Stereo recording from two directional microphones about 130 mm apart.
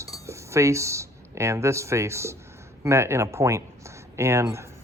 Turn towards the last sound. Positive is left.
turn(degrees=-20)  # may be behind; listen again after turning